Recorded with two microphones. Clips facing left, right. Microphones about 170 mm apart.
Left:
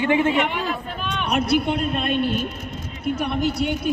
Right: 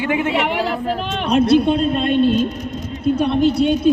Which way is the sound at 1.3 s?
25° right (ahead or behind).